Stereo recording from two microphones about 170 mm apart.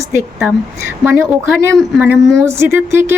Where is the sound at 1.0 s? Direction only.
15° right (ahead or behind).